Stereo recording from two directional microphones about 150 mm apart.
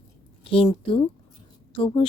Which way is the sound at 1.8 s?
35° left (ahead or behind).